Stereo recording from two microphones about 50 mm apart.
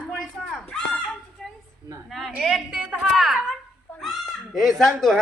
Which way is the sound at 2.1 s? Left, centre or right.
Centre.